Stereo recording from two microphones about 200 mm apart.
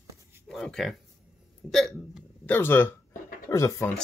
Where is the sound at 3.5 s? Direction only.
15° left (ahead or behind).